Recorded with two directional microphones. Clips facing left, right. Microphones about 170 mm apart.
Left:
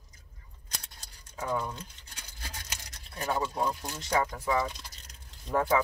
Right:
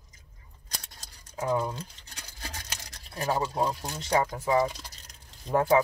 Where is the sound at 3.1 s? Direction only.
30° right (ahead or behind).